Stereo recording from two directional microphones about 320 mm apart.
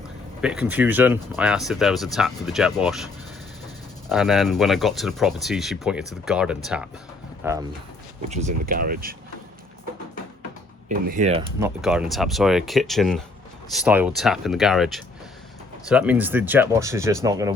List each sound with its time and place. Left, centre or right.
0.7 s speech: centre
4.1 s speech: centre
8.3 s speech: right
10.8 s speech: right
11.8 s speech: centre